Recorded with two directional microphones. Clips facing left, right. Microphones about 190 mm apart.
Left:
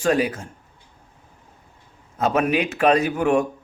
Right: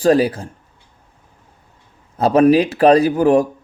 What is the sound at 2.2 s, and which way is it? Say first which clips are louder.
Speech: right 8 dB; 35° right (ahead or behind).